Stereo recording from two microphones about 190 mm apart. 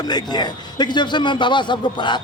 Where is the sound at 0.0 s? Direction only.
20° left (ahead or behind).